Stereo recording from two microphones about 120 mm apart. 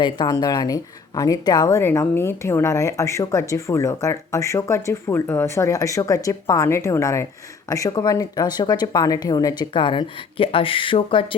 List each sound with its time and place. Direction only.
0.0 s speech: 35° left (ahead or behind)
1.8 s speech: 20° left (ahead or behind)
9.7 s speech: 45° left (ahead or behind)